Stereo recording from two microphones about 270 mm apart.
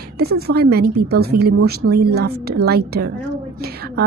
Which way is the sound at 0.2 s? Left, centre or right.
Right.